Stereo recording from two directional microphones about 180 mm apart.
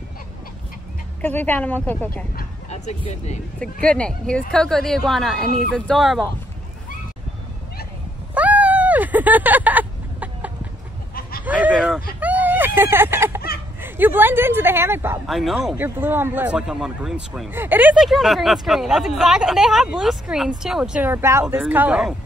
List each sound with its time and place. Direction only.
1.2 s a woman's voice: 10° left (ahead or behind)
2.7 s speech: 40° left (ahead or behind)
3.8 s a man's voice: 5° left (ahead or behind)
8.4 s a sound: 10° right (ahead or behind)
13.7 s speech: 10° right (ahead or behind)
15.2 s a man's voice: centre (ahead or behind)
15.7 s a man's voice: 10° right (ahead or behind)